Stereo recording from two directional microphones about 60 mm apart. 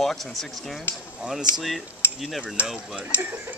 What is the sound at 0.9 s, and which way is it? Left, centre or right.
Speech, left.